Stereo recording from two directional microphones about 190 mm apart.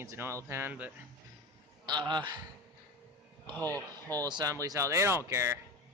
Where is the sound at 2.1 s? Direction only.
25° right (ahead or behind).